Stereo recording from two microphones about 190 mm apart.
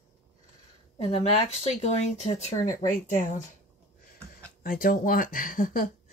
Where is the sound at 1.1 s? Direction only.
35° left (ahead or behind).